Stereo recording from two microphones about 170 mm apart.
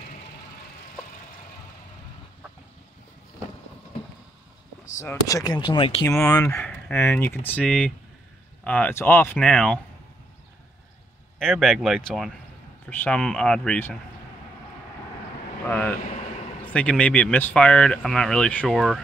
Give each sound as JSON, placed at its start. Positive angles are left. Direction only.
{"t": 4.9, "sound": "speech", "side_deg": 20}
{"t": 6.2, "sound": "speech", "side_deg": 15}
{"t": 11.3, "sound": "speech", "side_deg": 0}
{"t": 15.6, "sound": "speech", "side_deg": 10}